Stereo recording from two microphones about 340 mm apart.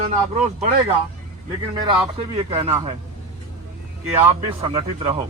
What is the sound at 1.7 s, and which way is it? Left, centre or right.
Speech, centre.